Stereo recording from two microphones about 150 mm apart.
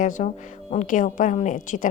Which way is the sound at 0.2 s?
55° left (ahead or behind).